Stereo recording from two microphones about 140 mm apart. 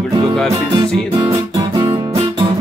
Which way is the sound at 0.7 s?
30° right (ahead or behind).